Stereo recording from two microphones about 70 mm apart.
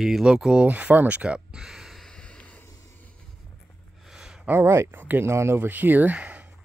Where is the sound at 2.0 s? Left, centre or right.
Centre.